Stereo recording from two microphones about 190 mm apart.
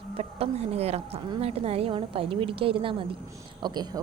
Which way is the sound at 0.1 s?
30° right (ahead or behind).